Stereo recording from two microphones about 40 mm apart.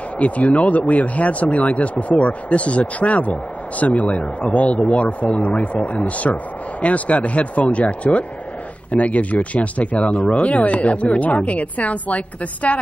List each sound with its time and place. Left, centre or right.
0.2 s a woman's voice: left